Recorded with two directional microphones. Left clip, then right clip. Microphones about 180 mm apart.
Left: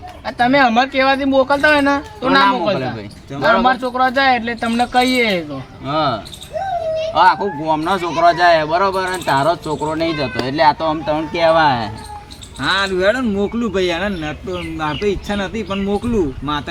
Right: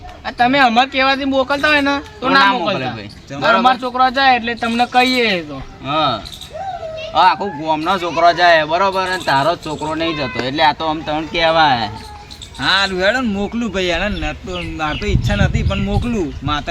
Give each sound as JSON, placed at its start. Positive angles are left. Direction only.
{"t": 0.3, "sound": "speech", "side_deg": 10}
{"t": 2.4, "sound": "speech", "side_deg": -10}
{"t": 3.6, "sound": "speech", "side_deg": 10}
{"t": 5.8, "sound": "speech", "side_deg": -10}
{"t": 7.1, "sound": "speech", "side_deg": -10}
{"t": 12.5, "sound": "speech", "side_deg": -25}